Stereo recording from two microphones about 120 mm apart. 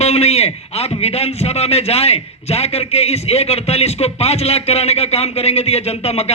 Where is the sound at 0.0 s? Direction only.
60° left (ahead or behind).